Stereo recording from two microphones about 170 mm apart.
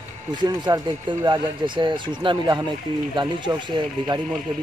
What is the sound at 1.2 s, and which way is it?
A man's voice, 25° right (ahead or behind).